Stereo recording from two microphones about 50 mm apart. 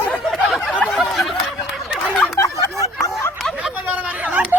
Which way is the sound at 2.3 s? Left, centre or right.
Left.